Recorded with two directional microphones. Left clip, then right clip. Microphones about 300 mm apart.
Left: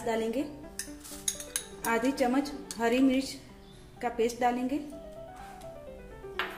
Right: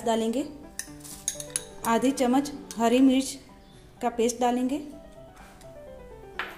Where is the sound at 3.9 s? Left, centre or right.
Right.